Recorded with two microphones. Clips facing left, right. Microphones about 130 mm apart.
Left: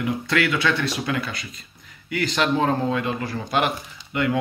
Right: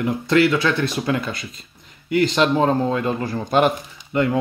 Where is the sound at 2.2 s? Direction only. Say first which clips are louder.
Right 4 dB; 30° right (ahead or behind).